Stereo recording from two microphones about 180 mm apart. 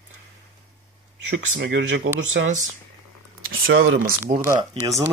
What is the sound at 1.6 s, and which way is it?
Speech, 90° right.